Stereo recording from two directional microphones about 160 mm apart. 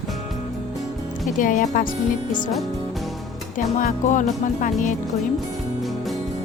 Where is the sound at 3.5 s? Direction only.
55° left (ahead or behind).